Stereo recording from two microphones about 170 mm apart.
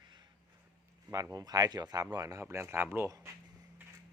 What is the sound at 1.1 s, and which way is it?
Speech, 20° right (ahead or behind).